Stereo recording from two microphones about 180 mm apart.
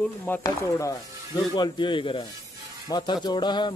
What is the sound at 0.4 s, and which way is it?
Speech, 20° left (ahead or behind).